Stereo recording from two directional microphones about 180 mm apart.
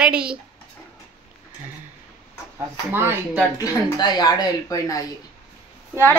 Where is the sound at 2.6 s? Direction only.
10° right (ahead or behind).